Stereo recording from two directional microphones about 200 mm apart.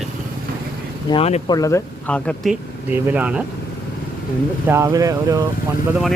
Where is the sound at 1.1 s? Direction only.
30° left (ahead or behind).